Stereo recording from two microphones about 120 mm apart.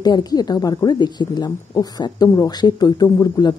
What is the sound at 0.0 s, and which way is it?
Speech, 35° left (ahead or behind).